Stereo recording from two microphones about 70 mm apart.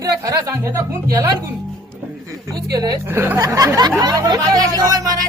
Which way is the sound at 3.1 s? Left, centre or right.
Right.